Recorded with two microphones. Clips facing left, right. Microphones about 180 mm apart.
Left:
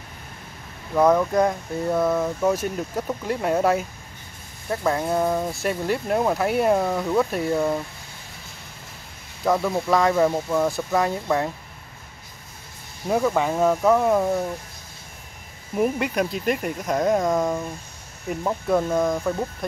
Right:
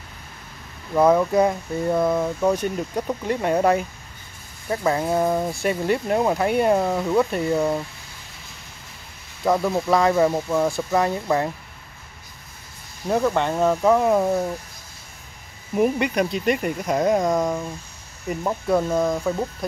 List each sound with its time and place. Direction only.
0.9 s speech: 5° right (ahead or behind)
9.4 s speech: 5° right (ahead or behind)
13.1 s speech: centre (ahead or behind)
15.7 s speech: centre (ahead or behind)